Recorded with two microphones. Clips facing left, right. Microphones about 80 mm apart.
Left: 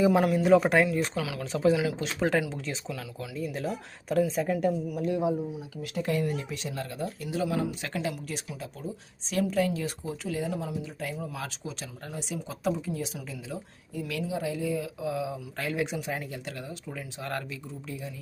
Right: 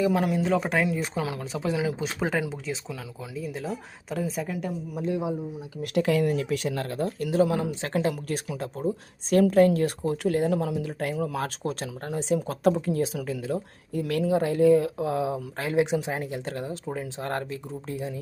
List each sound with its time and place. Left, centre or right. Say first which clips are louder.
0.1 s a woman's voice: left 3 dB; centre
0.9 s speech: even; centre
1.5 s a woman's voice: left 4 dB; centre
5.0 s speech: even; right
5.8 s speech: right 6 dB; right
8.4 s speech: right 8 dB; right
9.3 s speech: right 8 dB; right
15.5 s speech: right 7 dB; right